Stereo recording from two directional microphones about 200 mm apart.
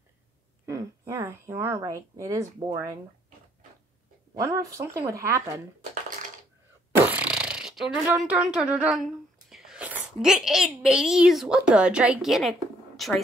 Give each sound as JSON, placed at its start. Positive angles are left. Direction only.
{"t": 0.7, "sound": "speech", "side_deg": -15}
{"t": 4.4, "sound": "speech", "side_deg": -15}
{"t": 7.1, "sound": "a sound", "side_deg": -5}
{"t": 8.2, "sound": "speech", "side_deg": -5}